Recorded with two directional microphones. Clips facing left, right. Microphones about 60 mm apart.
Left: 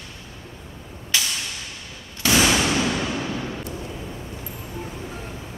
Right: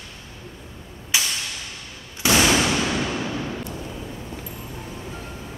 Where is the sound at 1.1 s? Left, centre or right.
Centre.